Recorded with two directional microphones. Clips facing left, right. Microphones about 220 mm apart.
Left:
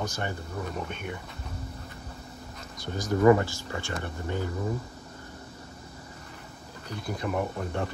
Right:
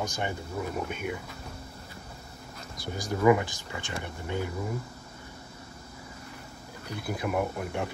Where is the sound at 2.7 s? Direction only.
10° right (ahead or behind).